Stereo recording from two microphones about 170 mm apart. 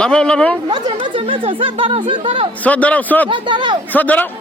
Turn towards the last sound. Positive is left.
turn(degrees=10)  # may be behind; listen again after turning